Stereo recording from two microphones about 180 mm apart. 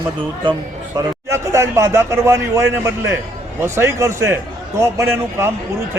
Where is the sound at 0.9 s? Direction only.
15° right (ahead or behind).